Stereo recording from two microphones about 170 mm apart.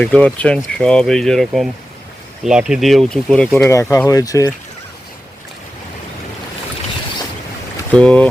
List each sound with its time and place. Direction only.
0.0 s speech: 5° left (ahead or behind)
3.7 s speech: 15° left (ahead or behind)
7.9 s speech: 5° left (ahead or behind)